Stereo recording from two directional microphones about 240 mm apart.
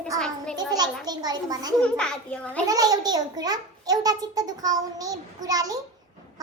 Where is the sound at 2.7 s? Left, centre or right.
Centre.